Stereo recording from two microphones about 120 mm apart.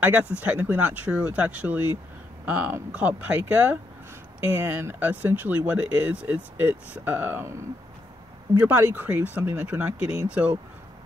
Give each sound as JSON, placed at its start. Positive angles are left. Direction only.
{"t": 0.0, "sound": "speech", "side_deg": -15}
{"t": 8.5, "sound": "speech", "side_deg": -15}